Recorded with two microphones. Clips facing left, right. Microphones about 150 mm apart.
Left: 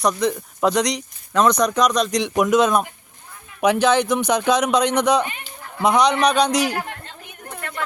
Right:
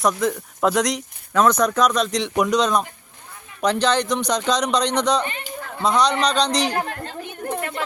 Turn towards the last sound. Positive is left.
turn(degrees=-35)  # may be behind; listen again after turning